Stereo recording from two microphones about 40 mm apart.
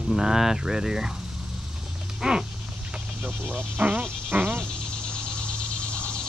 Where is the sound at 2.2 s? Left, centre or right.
Centre.